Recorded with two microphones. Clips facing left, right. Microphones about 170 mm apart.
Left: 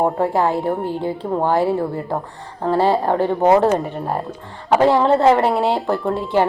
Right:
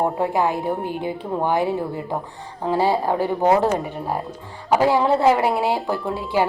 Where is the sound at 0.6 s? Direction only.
Centre (ahead or behind).